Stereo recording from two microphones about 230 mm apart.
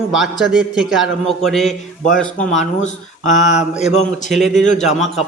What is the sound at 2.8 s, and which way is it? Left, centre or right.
Speech, left.